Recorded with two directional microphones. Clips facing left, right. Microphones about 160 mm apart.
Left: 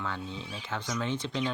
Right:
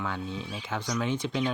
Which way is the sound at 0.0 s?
15° right (ahead or behind).